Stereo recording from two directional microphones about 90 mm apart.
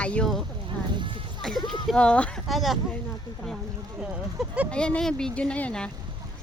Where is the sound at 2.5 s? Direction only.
Centre (ahead or behind).